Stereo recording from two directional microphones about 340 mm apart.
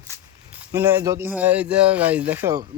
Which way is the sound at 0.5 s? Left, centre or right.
Centre.